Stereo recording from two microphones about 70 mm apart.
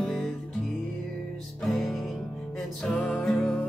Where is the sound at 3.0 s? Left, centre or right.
Centre.